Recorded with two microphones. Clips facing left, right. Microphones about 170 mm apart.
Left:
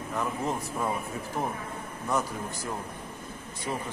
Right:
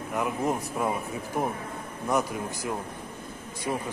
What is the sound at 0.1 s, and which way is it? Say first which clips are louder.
A man's voice: right 3 dB; 15° right (ahead or behind).